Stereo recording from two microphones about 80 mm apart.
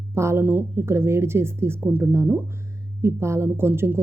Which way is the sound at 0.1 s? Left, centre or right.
Right.